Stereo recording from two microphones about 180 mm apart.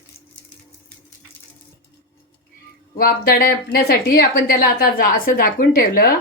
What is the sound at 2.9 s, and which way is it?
A woman's voice, 55° left (ahead or behind).